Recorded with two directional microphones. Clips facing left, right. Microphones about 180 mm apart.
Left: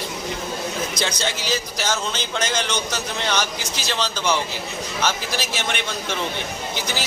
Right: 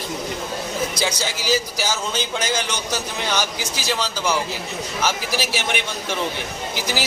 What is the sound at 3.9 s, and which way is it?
A man's voice, 5° right (ahead or behind).